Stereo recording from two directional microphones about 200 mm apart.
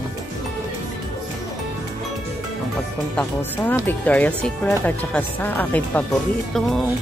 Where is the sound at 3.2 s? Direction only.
10° left (ahead or behind).